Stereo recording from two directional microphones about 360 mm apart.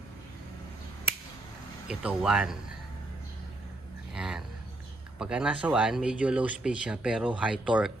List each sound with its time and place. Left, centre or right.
1.9 s speech: centre
4.1 s a sound: centre
5.2 s speech: centre